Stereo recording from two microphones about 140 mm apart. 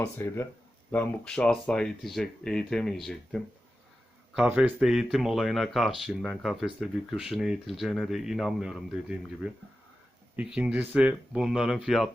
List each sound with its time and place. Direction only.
0.0 s speech: 15° left (ahead or behind)
4.4 s a man's voice: 10° right (ahead or behind)